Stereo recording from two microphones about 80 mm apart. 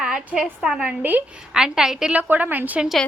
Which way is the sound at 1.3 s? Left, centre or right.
Centre.